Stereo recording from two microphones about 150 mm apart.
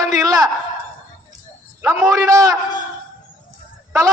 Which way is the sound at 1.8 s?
20° right (ahead or behind).